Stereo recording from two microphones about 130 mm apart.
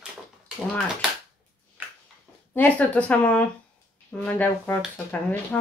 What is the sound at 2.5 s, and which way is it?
Speech, 10° left (ahead or behind).